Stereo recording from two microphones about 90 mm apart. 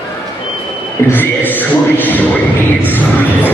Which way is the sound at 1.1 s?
20° left (ahead or behind).